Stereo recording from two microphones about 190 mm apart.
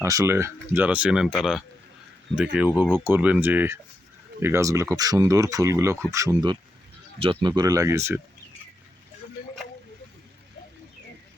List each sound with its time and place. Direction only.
0.0 s speech: 15° right (ahead or behind)